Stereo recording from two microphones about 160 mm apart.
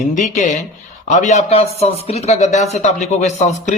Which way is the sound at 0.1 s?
50° left (ahead or behind).